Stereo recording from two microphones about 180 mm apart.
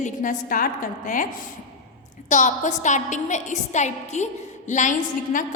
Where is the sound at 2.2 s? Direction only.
40° left (ahead or behind).